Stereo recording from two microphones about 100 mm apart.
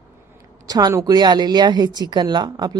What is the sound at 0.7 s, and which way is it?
Speech, 40° right (ahead or behind).